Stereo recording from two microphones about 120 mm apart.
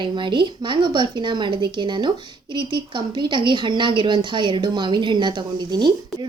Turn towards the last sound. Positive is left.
turn(degrees=-35)  # may be behind; listen again after turning